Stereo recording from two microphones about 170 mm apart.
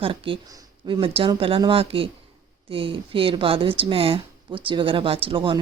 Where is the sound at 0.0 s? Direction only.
30° right (ahead or behind).